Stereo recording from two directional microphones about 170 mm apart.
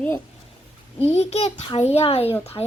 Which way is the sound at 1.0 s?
35° left (ahead or behind).